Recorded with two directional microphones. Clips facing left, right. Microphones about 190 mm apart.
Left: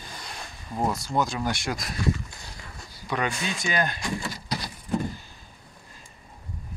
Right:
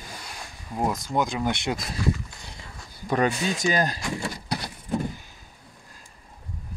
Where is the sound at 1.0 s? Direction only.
20° right (ahead or behind).